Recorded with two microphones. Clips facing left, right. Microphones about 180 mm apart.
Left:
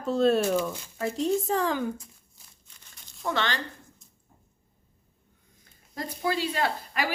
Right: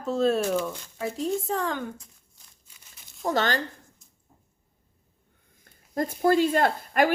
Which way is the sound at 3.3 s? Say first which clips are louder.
Right 4 dB; 40° right (ahead or behind).